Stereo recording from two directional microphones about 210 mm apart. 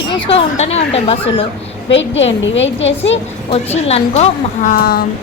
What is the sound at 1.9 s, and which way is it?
A woman's voice, 60° left (ahead or behind).